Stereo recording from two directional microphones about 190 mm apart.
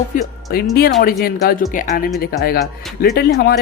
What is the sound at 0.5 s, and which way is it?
Speech, 55° left (ahead or behind).